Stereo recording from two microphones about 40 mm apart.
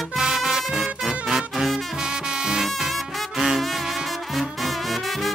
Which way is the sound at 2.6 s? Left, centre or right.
Centre.